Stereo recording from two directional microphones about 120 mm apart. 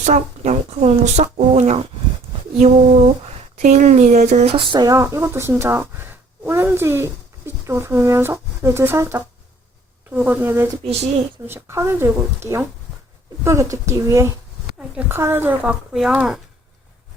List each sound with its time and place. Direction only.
0.0 s speech: 75° right (ahead or behind)
2.6 s a sound: 60° right (ahead or behind)
3.6 s speech: 80° right
4.5 s speech: 40° right (ahead or behind)
4.9 s speech: 25° right (ahead or behind)
15.9 s speech: 5° right (ahead or behind)